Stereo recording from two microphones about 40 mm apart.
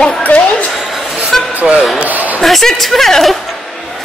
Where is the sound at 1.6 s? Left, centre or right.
Centre.